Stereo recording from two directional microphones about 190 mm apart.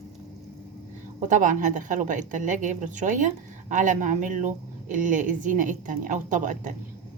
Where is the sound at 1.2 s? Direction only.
45° right (ahead or behind).